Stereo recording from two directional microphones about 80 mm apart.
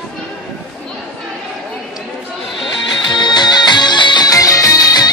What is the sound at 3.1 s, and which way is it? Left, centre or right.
Music, left.